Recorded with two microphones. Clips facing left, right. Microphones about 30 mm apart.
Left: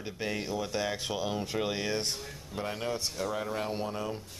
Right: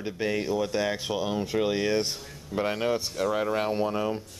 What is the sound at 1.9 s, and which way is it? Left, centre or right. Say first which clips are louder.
Speech: right 5 dB; centre.